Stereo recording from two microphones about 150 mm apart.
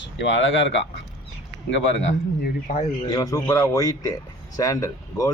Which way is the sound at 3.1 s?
25° left (ahead or behind).